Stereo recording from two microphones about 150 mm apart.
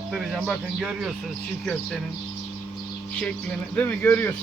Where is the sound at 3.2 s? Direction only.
10° left (ahead or behind).